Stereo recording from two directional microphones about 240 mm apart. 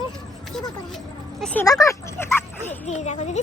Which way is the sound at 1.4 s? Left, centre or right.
Centre.